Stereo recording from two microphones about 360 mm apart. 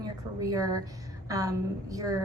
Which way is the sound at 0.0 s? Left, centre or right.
Centre.